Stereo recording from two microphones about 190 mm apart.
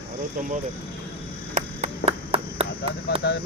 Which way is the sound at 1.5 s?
35° right (ahead or behind).